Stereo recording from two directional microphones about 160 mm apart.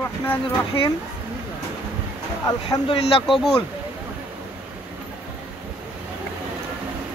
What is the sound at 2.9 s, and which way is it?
Speech, 35° left (ahead or behind).